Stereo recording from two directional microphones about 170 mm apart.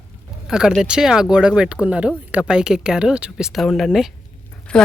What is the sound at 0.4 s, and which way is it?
A man's voice, 5° right (ahead or behind).